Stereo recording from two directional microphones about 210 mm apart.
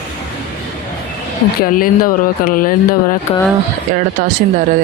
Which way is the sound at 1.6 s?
40° left (ahead or behind).